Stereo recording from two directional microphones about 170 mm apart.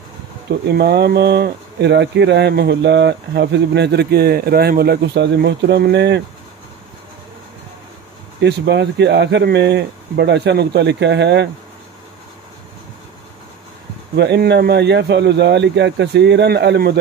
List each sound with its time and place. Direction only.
0.5 s speech: 75° right (ahead or behind)
8.4 s speech: 90° right
14.1 s speech: 75° right (ahead or behind)